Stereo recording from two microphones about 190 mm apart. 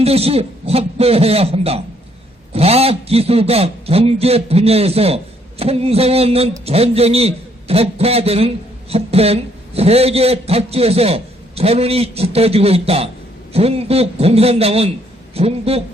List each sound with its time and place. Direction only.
0.0 s a man's voice: 30° right (ahead or behind)